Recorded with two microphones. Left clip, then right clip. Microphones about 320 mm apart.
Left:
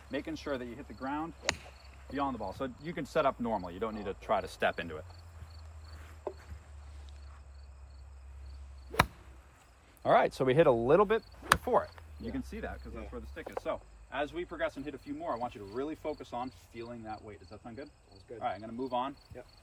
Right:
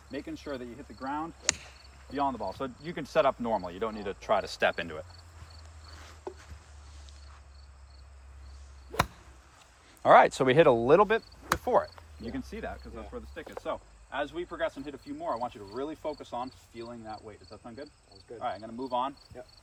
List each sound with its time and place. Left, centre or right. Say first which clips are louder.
0.1 s speech: left 1 dB; centre
2.1 s speech: right 4 dB; centre; by 5.0 s right
6.3 s a sound: left 2 dB; left
8.9 s a sound: left 1 dB; centre
10.0 s speech: right 7 dB; right
17.2 s speech: right 2 dB; centre
17.5 s speech: right 2 dB; centre